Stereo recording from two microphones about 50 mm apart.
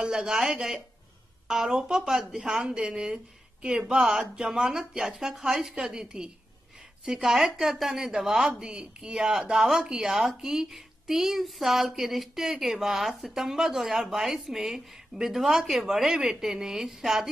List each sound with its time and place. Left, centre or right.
0.0 s a woman's voice: centre
8.5 s a woman's voice: centre